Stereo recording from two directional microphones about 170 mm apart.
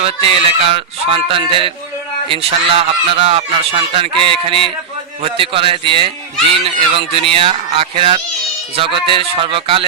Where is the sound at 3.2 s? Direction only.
35° right (ahead or behind).